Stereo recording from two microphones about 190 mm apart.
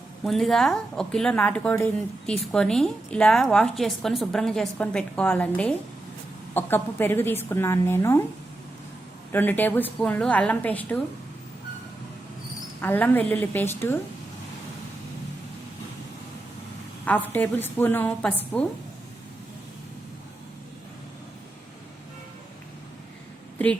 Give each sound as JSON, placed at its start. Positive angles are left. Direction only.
{"t": 0.3, "sound": "a woman's voice", "side_deg": 0}
{"t": 9.3, "sound": "a woman's voice", "side_deg": 10}
{"t": 12.8, "sound": "a woman's voice", "side_deg": 10}
{"t": 17.1, "sound": "a woman's voice", "side_deg": 10}